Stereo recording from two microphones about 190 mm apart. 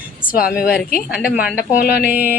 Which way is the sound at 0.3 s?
50° left (ahead or behind).